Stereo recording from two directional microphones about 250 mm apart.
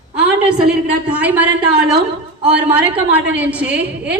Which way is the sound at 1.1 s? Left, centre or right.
Centre.